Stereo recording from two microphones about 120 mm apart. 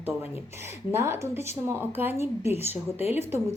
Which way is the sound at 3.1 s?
20° right (ahead or behind).